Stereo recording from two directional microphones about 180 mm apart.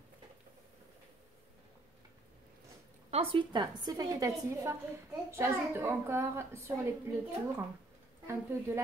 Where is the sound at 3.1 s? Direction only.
30° right (ahead or behind); by 6.6 s 15° right (ahead or behind).